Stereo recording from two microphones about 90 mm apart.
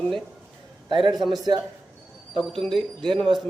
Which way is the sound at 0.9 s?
65° right (ahead or behind).